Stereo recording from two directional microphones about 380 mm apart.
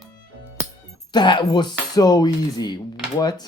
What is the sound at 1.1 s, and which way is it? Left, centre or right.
Speech, centre.